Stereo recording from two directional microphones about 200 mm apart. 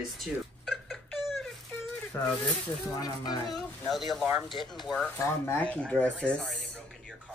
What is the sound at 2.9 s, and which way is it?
Speech, 20° left (ahead or behind).